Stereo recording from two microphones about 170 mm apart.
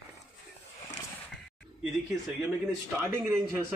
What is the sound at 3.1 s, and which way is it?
Speech, 15° right (ahead or behind).